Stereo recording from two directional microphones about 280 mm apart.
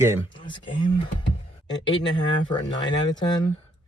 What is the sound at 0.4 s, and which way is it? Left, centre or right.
Speech, centre.